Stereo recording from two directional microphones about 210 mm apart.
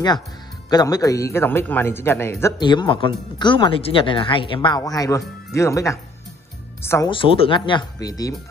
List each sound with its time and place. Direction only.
0.7 s a man's voice: 20° left (ahead or behind)
7.1 s speech: 25° left (ahead or behind)